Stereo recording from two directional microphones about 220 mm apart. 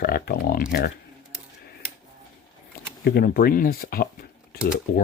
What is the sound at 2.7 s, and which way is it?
Speech, 45° left (ahead or behind).